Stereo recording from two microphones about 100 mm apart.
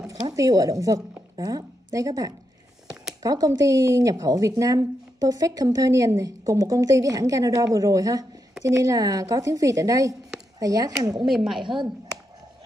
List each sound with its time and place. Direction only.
0.1 s speech: 35° right (ahead or behind)
11.2 s speech: 5° right (ahead or behind)
11.6 s speech: 55° right (ahead or behind)